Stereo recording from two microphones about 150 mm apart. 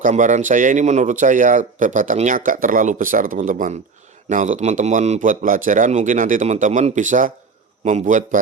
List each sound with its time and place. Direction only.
0.0 s speech: 60° right (ahead or behind)